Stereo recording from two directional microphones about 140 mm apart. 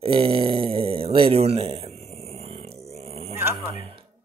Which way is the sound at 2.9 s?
45° right (ahead or behind).